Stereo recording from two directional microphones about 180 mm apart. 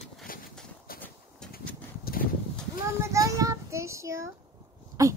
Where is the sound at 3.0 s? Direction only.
15° right (ahead or behind).